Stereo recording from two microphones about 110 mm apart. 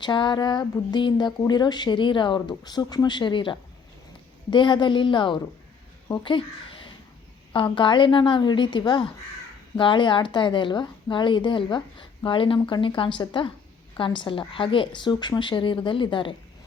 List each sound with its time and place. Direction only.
0.0 s speech: 45° left (ahead or behind)